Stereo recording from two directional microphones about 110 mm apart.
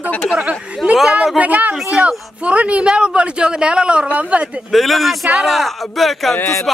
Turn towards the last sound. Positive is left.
turn(degrees=25)  # may be behind; listen again after turning